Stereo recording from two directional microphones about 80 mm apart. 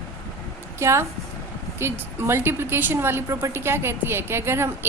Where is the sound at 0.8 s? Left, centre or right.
Right.